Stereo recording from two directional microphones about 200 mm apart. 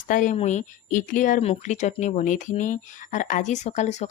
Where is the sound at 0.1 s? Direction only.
40° left (ahead or behind).